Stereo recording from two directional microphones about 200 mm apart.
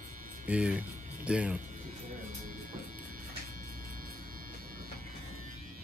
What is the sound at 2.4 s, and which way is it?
Music, 45° right (ahead or behind).